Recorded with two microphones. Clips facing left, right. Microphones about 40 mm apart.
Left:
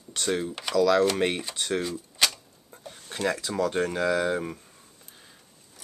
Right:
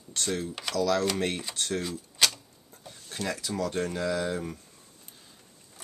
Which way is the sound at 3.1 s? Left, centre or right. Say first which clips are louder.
Left 5 dB; left.